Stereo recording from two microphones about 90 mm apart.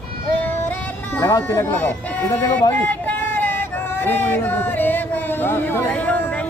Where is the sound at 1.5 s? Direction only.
30° left (ahead or behind).